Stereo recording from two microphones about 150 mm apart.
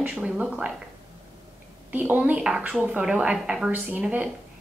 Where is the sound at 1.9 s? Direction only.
10° right (ahead or behind).